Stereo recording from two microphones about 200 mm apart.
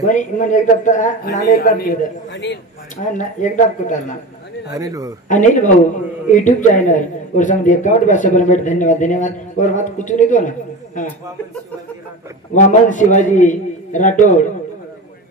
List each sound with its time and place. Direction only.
0.0 s a man's voice: 40° left (ahead or behind)
2.3 s a man's voice: 60° left (ahead or behind)
3.0 s a man's voice: 40° left (ahead or behind)
4.7 s speech: 15° right (ahead or behind)
5.3 s a man's voice: 40° left (ahead or behind)
12.5 s a man's voice: 40° left (ahead or behind)